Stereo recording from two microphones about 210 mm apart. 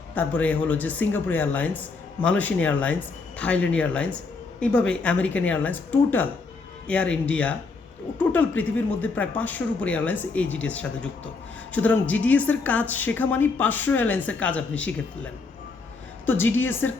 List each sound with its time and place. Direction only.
0.1 s a woman's voice: 10° left (ahead or behind)
16.2 s a woman's voice: 10° left (ahead or behind)